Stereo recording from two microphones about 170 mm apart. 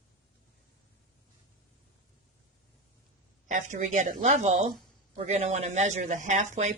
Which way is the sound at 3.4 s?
45° right (ahead or behind).